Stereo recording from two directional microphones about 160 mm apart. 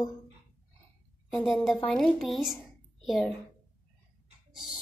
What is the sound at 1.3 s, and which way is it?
Speech, centre (ahead or behind).